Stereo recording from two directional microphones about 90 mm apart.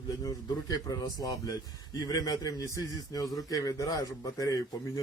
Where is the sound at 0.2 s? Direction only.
45° left (ahead or behind).